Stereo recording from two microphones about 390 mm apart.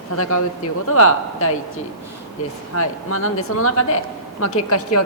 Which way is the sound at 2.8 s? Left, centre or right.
Left.